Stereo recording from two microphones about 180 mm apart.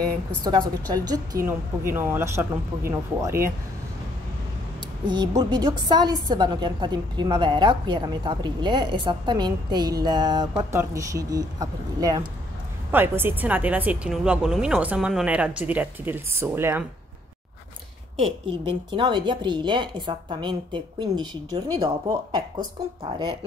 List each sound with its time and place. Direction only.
0.4 s speech: 25° right (ahead or behind)
5.0 s a woman's voice: 25° right (ahead or behind)
18.5 s a woman's voice: 25° right (ahead or behind)